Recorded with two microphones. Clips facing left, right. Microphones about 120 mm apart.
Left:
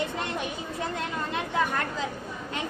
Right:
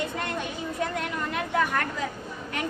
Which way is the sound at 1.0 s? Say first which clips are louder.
Right 1 dB; 25° left (ahead or behind).